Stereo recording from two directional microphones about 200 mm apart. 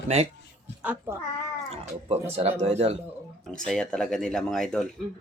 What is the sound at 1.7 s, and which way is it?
Speech, 30° right (ahead or behind).